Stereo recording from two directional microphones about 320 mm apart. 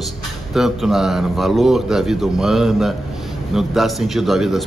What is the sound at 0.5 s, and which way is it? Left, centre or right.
A man's voice, centre.